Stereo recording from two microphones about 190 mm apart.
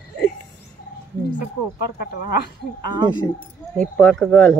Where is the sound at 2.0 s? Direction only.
55° left (ahead or behind).